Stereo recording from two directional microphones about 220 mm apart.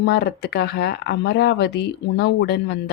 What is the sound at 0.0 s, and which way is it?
Speech, 50° left (ahead or behind).